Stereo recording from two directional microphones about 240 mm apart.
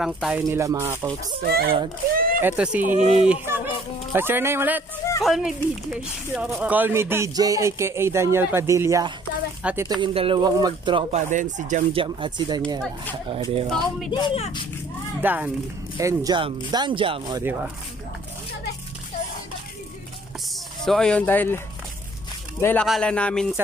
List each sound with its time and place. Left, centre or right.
0.0 s speech: centre
1.4 s speech: right
2.1 s a sound: right
2.4 s speech: centre
9.8 s speech: right
14.1 s speech: left
15.2 s speech: centre
20.8 s speech: centre
22.6 s speech: centre